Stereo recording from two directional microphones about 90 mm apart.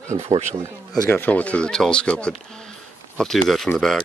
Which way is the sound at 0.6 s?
30° right (ahead or behind).